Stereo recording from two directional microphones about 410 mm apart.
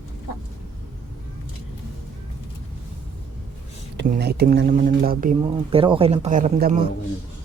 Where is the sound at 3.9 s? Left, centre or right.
Right.